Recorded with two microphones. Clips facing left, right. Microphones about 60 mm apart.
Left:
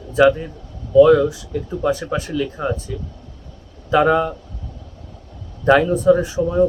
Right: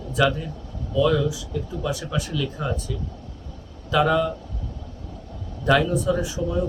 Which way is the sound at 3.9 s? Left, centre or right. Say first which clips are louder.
Left 5 dB; left.